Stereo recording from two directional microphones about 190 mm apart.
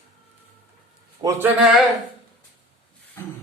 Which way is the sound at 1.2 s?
15° right (ahead or behind).